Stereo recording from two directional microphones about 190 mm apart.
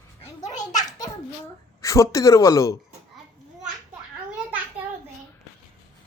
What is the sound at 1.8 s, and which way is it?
Speech, 15° left (ahead or behind).